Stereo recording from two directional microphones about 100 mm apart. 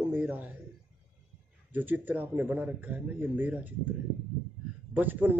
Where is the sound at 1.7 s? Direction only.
20° right (ahead or behind).